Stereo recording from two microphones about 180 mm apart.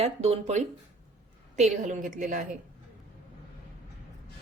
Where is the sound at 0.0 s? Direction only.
35° right (ahead or behind).